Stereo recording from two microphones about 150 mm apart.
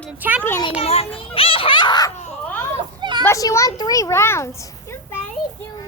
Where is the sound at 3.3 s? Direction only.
20° left (ahead or behind).